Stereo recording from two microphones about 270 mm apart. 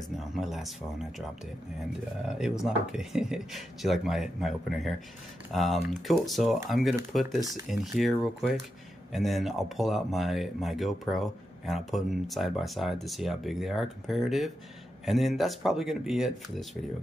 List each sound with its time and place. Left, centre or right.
0.2 s speech: centre
2.2 s speech: centre